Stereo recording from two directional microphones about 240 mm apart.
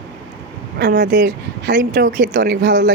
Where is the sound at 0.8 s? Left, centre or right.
Right.